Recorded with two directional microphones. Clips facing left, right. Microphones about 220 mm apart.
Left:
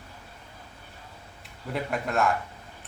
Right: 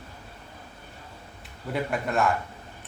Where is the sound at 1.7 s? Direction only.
Centre (ahead or behind).